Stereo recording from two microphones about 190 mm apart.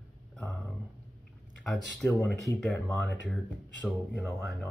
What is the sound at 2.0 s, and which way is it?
Speech, 5° left (ahead or behind).